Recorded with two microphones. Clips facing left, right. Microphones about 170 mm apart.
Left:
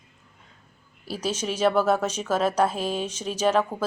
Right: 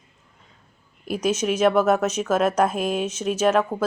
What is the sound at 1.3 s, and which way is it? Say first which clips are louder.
Speech: right 4 dB; 10° right (ahead or behind).